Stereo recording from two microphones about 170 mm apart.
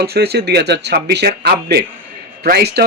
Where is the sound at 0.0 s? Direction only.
70° right (ahead or behind).